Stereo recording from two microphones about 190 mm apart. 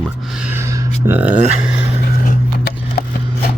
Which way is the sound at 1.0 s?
10° right (ahead or behind).